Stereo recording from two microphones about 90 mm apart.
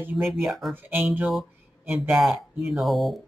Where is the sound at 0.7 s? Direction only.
20° right (ahead or behind).